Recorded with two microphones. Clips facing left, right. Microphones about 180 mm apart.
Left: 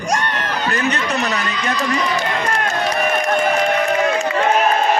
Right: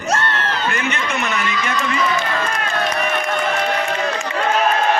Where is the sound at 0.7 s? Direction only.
35° left (ahead or behind).